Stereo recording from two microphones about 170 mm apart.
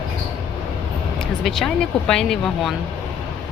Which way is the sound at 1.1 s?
Centre (ahead or behind).